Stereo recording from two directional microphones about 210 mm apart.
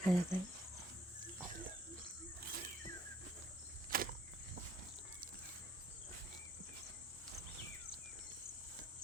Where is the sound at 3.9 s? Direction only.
40° right (ahead or behind).